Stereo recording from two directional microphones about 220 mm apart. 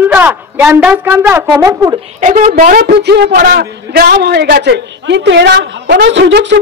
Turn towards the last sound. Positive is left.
turn(degrees=-55)  # may be behind; listen again after turning